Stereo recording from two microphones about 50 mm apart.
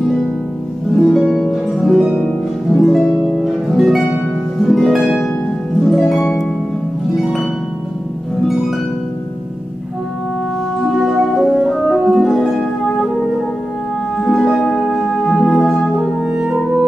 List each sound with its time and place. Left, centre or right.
0.9 s harp: centre
11.0 s music: centre
14.1 s music: centre
16.2 s music: centre